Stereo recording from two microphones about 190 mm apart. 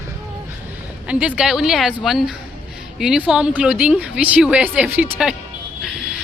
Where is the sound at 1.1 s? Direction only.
5° right (ahead or behind).